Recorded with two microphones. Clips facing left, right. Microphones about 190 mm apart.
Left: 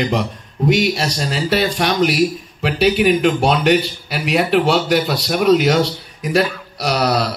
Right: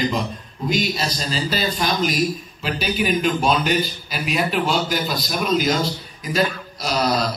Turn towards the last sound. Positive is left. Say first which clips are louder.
# left 3 dB
turn(degrees=70)  # may be behind; listen again after turning